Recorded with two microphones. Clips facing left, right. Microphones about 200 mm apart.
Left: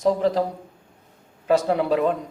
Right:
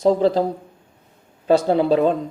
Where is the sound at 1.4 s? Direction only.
30° right (ahead or behind).